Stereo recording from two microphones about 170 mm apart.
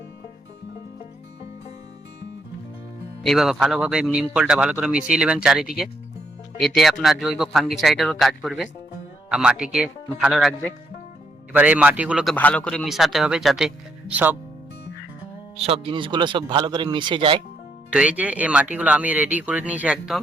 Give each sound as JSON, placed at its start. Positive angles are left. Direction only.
{"t": 3.2, "sound": "a man's voice", "side_deg": 0}
{"t": 15.5, "sound": "speech", "side_deg": -35}
{"t": 17.9, "sound": "speech", "side_deg": -5}